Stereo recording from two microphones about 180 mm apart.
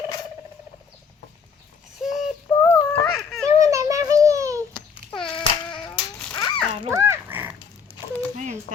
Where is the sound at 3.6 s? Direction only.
15° right (ahead or behind).